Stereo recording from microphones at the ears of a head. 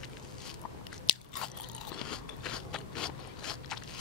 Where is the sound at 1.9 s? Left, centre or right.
Left.